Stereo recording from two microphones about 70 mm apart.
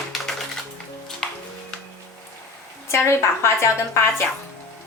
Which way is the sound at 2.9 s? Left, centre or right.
Left.